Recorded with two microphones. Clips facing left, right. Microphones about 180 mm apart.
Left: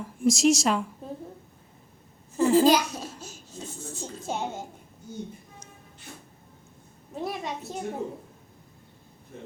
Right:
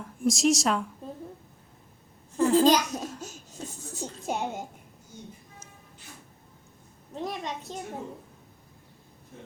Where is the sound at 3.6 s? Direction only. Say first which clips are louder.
Left 2 dB; 40° right (ahead or behind).